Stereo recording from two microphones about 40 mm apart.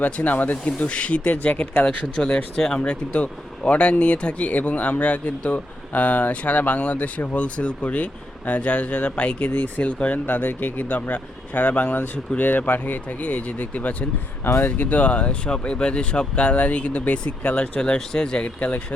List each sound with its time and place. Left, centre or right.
0.2 s speech: left
0.8 s speech: left
2.6 s speech: centre
2.9 s speech: left
9.5 s speech: left
9.8 s speech: left
10.2 s speech: left
11.1 s speech: left
17.7 s speech: centre
18.4 s speech: left